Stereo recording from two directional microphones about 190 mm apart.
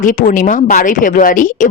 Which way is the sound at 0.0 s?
45° left (ahead or behind).